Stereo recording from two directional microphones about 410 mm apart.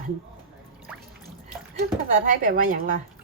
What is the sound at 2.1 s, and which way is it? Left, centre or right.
Speech, centre.